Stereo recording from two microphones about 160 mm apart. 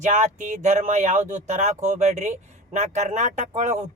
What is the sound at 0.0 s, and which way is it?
Speech, 50° right (ahead or behind).